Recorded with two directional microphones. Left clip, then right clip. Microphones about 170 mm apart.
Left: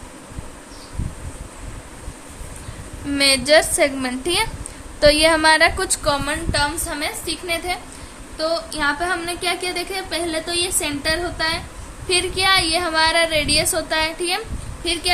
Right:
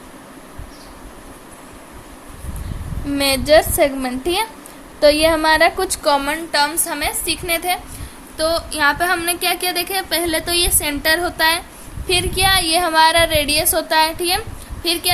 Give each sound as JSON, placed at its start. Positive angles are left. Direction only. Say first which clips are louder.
{"t": 3.2, "sound": "a woman's voice", "louder": "right 1 dB", "side_deg": -15}
{"t": 6.0, "sound": "a woman's voice", "louder": "right 5 dB", "side_deg": -30}
{"t": 12.0, "sound": "a woman's voice", "louder": "right 2 dB", "side_deg": -30}